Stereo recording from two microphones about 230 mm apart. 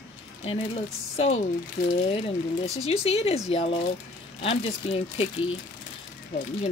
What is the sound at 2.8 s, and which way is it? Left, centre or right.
Speech, left.